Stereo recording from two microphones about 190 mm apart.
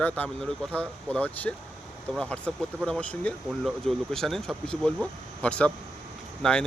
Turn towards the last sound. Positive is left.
turn(degrees=5)  # may be behind; listen again after turning